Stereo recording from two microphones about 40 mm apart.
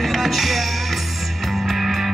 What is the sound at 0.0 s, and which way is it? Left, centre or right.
Music, centre.